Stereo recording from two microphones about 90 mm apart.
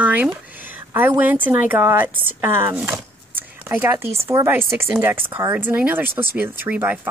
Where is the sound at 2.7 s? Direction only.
20° right (ahead or behind).